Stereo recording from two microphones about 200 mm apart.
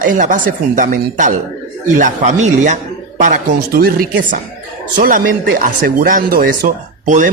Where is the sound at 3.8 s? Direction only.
45° right (ahead or behind).